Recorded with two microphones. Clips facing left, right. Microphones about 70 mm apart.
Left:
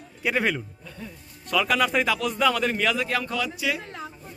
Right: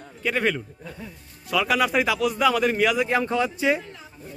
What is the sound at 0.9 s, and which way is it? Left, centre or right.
A man's voice, centre.